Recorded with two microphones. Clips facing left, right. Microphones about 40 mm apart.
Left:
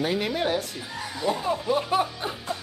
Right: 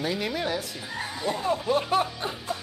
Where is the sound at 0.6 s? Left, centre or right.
Centre.